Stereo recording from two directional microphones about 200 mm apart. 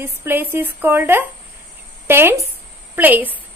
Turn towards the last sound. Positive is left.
turn(degrees=-10)  # may be behind; listen again after turning